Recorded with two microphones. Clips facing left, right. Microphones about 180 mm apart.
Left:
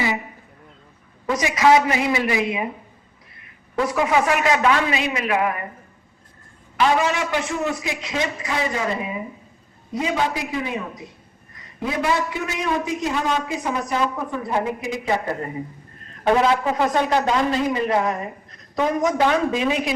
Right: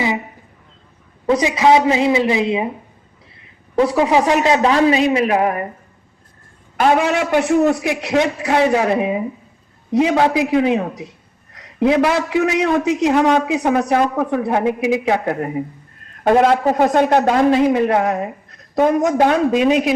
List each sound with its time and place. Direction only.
1.3 s a man's voice: 25° right (ahead or behind)
3.8 s a man's voice: 30° right (ahead or behind)
6.7 s a man's voice: 55° right (ahead or behind); by 14.8 s 75° right (ahead or behind)
14.9 s a man's voice: 65° right (ahead or behind)
16.2 s a man's voice: 50° right (ahead or behind)